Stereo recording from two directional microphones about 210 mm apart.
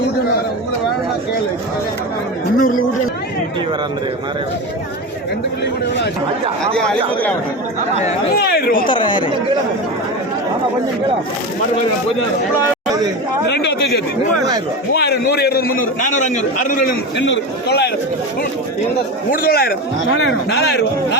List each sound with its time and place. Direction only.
2.6 s a man's voice: 40° left (ahead or behind)
6.7 s speech: 5° left (ahead or behind)
8.4 s a man's voice: 50° left (ahead or behind)
8.9 s speech: 20° left (ahead or behind)
13.5 s a man's voice: 55° left (ahead or behind)
17.2 s a man's voice: 60° left (ahead or behind)
19.3 s a man's voice: 45° left (ahead or behind)
20.1 s a man's voice: 55° left (ahead or behind)